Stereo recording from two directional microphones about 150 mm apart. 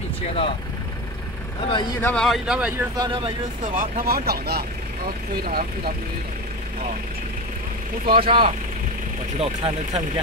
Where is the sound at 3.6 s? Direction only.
65° right (ahead or behind).